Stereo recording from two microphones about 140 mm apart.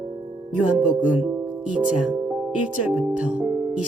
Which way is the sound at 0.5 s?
10° right (ahead or behind).